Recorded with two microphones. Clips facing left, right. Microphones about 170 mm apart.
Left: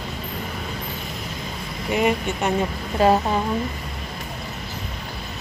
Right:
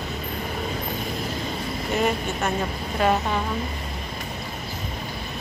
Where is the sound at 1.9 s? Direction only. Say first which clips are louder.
Left 3 dB; 15° left (ahead or behind).